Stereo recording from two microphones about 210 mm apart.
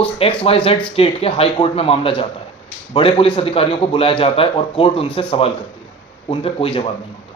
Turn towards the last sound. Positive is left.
turn(degrees=25)  # may be behind; listen again after turning